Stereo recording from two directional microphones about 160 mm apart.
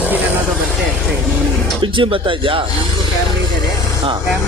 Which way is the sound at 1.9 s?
30° right (ahead or behind).